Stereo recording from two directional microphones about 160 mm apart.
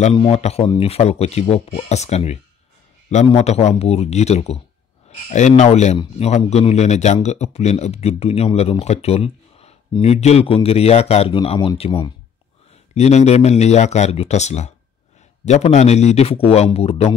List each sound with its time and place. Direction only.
0.1 s speech: 35° left (ahead or behind)